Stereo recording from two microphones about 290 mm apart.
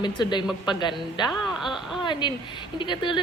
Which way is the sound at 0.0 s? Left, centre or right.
Centre.